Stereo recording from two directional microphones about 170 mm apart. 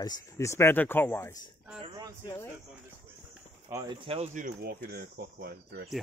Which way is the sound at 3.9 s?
35° right (ahead or behind).